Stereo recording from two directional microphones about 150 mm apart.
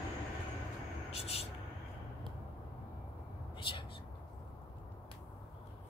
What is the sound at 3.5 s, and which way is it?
Whispering, 35° left (ahead or behind).